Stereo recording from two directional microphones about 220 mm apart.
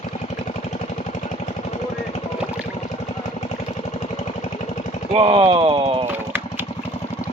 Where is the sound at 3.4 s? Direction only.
30° left (ahead or behind).